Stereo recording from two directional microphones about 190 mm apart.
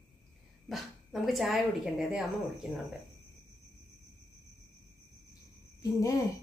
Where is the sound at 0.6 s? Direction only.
Centre (ahead or behind).